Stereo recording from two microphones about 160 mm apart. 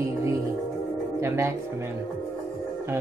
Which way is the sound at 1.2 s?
15° right (ahead or behind).